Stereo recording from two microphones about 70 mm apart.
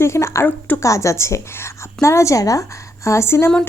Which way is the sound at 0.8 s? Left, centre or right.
Left.